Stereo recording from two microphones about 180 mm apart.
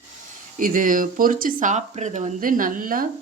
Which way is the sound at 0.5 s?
50° right (ahead or behind).